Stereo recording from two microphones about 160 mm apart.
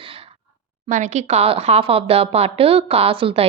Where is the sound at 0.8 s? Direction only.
50° right (ahead or behind).